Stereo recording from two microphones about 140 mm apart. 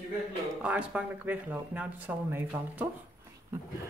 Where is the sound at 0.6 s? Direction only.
10° right (ahead or behind).